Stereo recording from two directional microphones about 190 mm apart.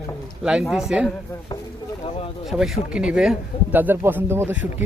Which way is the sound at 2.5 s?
5° right (ahead or behind).